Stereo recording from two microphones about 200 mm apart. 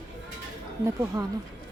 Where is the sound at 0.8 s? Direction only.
15° right (ahead or behind).